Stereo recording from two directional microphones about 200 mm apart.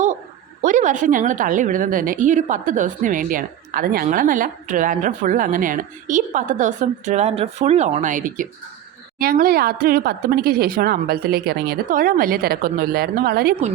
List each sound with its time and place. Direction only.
0.6 s a woman's voice: 40° right (ahead or behind)